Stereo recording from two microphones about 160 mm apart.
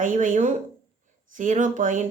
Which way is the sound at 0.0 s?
55° right (ahead or behind).